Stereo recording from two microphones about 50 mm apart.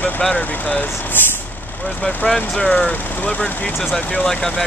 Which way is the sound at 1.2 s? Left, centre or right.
Left.